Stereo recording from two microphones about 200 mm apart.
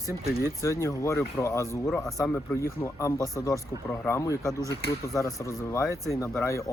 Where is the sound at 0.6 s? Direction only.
15° left (ahead or behind).